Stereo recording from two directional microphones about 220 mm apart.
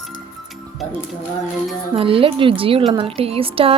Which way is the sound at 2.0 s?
25° right (ahead or behind).